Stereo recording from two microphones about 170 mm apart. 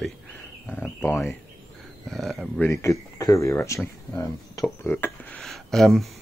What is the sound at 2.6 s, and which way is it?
Speech, 15° left (ahead or behind).